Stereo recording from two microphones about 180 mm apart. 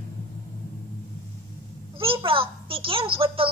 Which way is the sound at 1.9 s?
30° right (ahead or behind).